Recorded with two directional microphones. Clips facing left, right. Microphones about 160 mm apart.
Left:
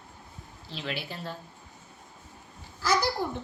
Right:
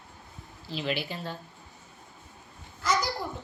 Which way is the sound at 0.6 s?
5° right (ahead or behind).